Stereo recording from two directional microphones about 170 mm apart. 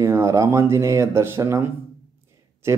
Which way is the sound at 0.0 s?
15° right (ahead or behind).